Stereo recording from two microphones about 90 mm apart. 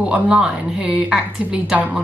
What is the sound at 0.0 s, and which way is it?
A woman's voice, 10° right (ahead or behind).